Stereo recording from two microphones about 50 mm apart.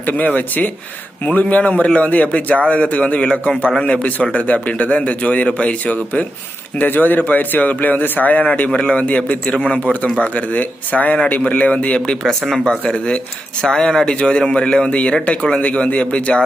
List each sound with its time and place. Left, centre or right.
0.0 s a man's voice: left
12.0 s a man's voice: centre; by 16.4 s left